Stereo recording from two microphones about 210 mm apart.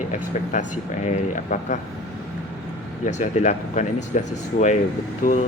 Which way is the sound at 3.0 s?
35° left (ahead or behind).